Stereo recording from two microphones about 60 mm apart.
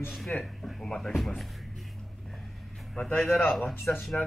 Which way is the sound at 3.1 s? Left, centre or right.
Left.